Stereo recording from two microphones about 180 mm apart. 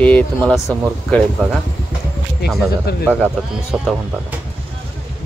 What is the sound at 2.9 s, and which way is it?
Speech, 65° left (ahead or behind).